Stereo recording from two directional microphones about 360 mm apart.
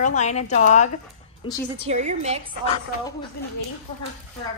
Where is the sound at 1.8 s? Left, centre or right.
Centre.